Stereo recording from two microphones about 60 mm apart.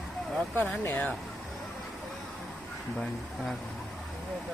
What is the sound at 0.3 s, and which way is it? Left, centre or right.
Speech, left.